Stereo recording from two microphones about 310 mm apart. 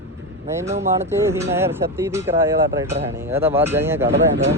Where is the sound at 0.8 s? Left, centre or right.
Centre.